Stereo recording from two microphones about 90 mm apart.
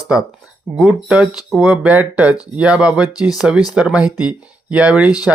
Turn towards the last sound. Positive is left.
turn(degrees=-15)  # may be behind; listen again after turning